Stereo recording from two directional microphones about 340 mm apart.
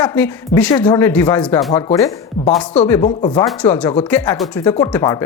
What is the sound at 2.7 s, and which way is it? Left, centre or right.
Speech, centre.